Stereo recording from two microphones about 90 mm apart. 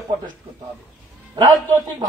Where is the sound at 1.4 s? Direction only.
50° right (ahead or behind).